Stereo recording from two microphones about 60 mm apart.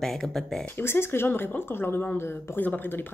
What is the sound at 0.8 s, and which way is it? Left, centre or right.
Speech, left.